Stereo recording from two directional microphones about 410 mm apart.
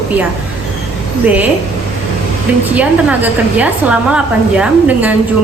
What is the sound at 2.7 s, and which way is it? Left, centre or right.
A woman's voice, centre.